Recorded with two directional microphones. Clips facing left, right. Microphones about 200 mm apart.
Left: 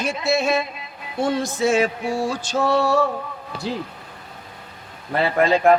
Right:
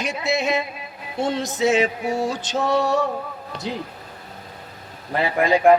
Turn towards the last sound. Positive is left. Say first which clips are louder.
# even
turn(degrees=-15)  # may be behind; listen again after turning